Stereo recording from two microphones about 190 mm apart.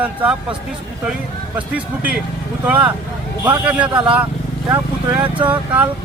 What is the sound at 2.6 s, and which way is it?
Speech, 5° right (ahead or behind).